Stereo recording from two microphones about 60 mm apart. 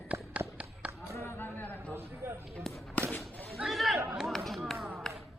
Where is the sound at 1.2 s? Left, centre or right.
Left.